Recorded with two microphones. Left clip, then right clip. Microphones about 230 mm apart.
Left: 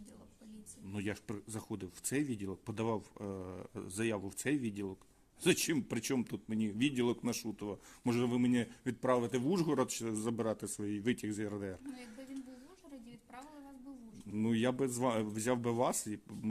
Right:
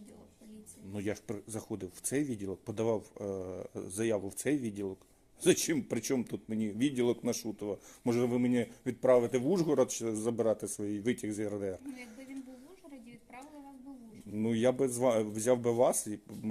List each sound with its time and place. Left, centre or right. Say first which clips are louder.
0.9 s speech: right 4 dB; left
14.3 s speech: right 5 dB; left